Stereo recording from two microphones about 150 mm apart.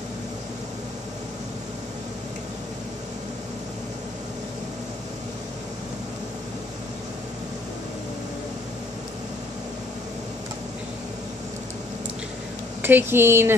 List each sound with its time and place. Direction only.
12.8 s speech: 15° right (ahead or behind)